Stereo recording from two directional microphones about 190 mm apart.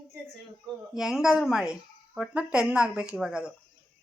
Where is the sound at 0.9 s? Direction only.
Centre (ahead or behind).